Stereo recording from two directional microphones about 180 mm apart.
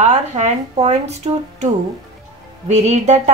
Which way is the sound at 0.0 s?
40° right (ahead or behind).